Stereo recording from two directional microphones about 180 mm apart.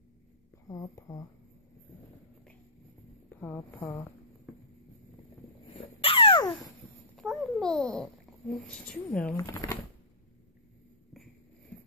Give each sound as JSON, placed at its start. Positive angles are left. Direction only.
{"t": 0.7, "sound": "speech", "side_deg": 20}
{"t": 3.3, "sound": "speech", "side_deg": 15}
{"t": 5.8, "sound": "a sound", "side_deg": 30}
{"t": 7.2, "sound": "a child's voice", "side_deg": 0}
{"t": 9.4, "sound": "speech", "side_deg": 15}